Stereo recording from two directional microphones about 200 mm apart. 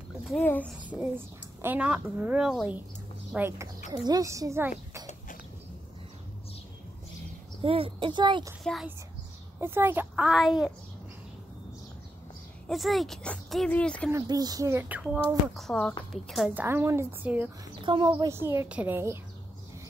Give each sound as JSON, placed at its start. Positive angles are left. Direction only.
{"t": 0.3, "sound": "speech", "side_deg": 10}
{"t": 0.8, "sound": "a woman's voice", "side_deg": -10}
{"t": 7.6, "sound": "speech", "side_deg": -25}
{"t": 9.6, "sound": "speech", "side_deg": -10}
{"t": 12.6, "sound": "speech", "side_deg": 0}
{"t": 14.1, "sound": "a woman's voice", "side_deg": -20}
{"t": 15.1, "sound": "a woman's voice", "side_deg": 5}
{"t": 17.8, "sound": "a woman's voice", "side_deg": -25}